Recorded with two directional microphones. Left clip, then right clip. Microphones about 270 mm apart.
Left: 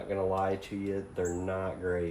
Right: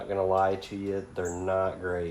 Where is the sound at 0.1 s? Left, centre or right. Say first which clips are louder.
Right 5 dB; right.